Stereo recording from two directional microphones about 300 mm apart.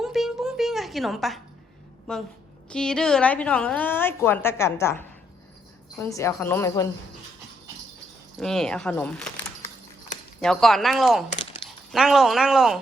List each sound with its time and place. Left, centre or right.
0.0 s music: centre
2.1 s a woman's voice: centre
8.4 s a woman's voice: centre
10.4 s a woman's voice: centre
11.3 s dog: centre
11.9 s a woman's voice: centre